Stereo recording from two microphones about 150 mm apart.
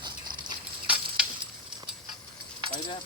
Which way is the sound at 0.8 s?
5° right (ahead or behind).